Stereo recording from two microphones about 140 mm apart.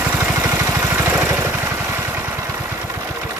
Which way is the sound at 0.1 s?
15° right (ahead or behind).